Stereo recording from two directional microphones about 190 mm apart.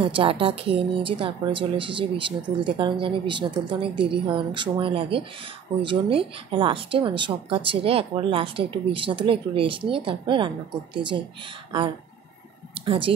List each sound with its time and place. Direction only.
0.0 s a woman's voice: 30° right (ahead or behind)
12.8 s speech: 25° right (ahead or behind)